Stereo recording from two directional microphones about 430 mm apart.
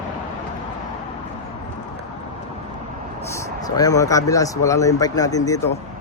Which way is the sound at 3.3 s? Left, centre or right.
Centre.